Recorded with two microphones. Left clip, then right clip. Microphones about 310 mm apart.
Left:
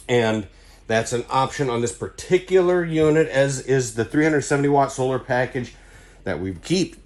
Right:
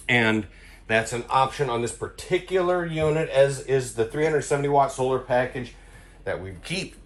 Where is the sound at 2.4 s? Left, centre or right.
Left.